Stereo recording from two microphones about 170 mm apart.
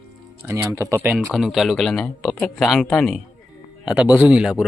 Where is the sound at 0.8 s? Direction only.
15° right (ahead or behind).